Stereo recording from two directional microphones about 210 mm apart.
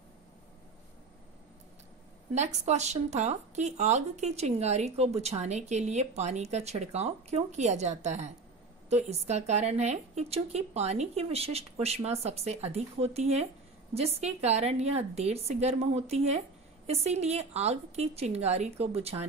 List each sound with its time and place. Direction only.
2.3 s speech: 35° right (ahead or behind)